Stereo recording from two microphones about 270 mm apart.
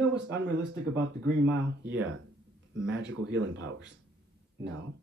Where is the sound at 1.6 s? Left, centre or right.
Right.